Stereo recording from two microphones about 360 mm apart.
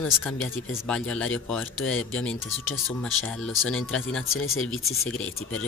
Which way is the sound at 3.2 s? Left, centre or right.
Centre.